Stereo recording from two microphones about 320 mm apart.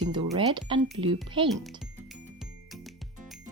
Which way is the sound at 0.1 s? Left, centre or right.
Centre.